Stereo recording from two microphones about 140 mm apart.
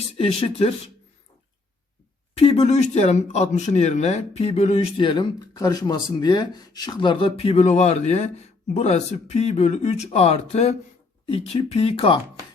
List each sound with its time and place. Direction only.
0.2 s speech: 40° left (ahead or behind)
2.3 s speech: 45° left (ahead or behind)